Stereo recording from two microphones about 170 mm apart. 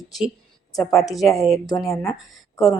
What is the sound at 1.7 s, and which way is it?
Speech, 20° left (ahead or behind).